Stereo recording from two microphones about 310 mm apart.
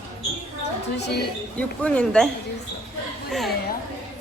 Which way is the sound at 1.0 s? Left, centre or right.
Left.